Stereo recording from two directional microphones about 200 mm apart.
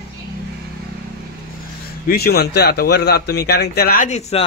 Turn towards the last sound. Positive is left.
turn(degrees=30)  # may be behind; listen again after turning